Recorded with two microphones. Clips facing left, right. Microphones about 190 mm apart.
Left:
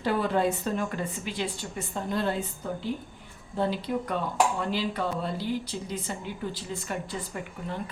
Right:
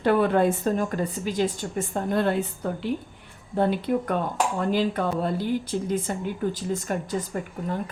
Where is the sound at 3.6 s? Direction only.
55° right (ahead or behind).